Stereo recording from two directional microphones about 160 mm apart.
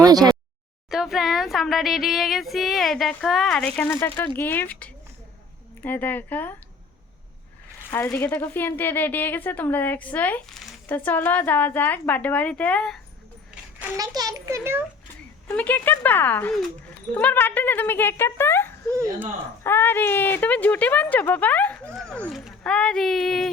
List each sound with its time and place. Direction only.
0.0 s a sound: 25° right (ahead or behind)
0.9 s speech: centre (ahead or behind)
7.9 s speech: 15° left (ahead or behind)
13.9 s a child's voice: 25° right (ahead or behind)
15.4 s speech: 10° left (ahead or behind)
18.9 s a child's voice: 20° right (ahead or behind)
19.6 s speech: 15° left (ahead or behind)